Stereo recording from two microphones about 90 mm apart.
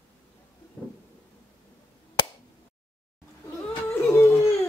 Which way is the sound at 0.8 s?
10° left (ahead or behind).